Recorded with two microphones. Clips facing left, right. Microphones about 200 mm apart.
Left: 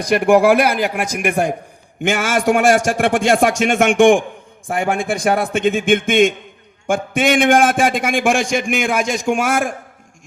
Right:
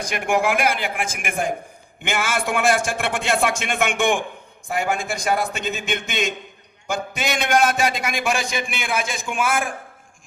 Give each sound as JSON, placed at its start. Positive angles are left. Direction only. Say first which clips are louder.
{"t": 0.0, "sound": "a man's voice", "louder": "left 9 dB", "side_deg": 35}